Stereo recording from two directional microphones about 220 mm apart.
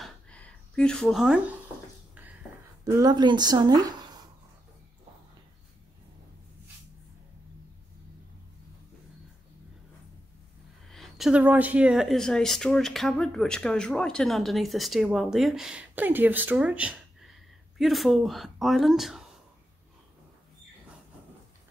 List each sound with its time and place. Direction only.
0.0 s a sound: 5° left (ahead or behind)
2.8 s speech: 15° right (ahead or behind)
10.9 s speech: centre (ahead or behind)